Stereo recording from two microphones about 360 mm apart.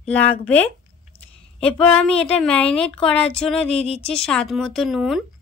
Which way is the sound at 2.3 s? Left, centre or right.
Centre.